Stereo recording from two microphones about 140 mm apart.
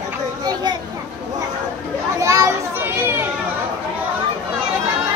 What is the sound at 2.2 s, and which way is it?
Children playing, 20° right (ahead or behind).